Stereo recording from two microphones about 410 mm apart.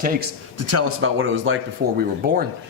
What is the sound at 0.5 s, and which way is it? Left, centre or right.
Speech, right.